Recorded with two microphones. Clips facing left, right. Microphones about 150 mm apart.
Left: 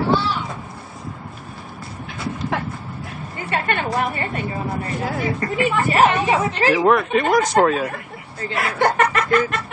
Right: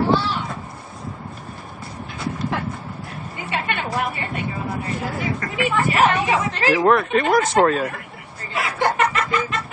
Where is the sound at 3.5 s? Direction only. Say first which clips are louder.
Left 3 dB; 50° left (ahead or behind).